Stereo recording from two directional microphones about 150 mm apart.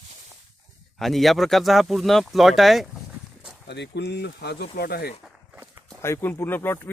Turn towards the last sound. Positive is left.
turn(degrees=15)  # may be behind; listen again after turning